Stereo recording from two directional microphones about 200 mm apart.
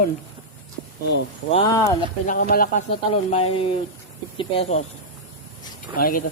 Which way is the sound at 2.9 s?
30° left (ahead or behind).